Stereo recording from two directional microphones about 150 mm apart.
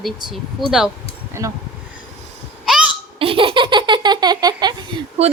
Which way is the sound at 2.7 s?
5° right (ahead or behind).